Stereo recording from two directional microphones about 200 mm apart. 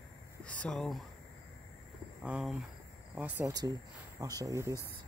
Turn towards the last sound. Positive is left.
turn(degrees=-15)  # may be behind; listen again after turning